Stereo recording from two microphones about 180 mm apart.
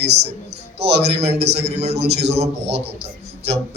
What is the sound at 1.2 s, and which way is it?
Speech, 35° right (ahead or behind).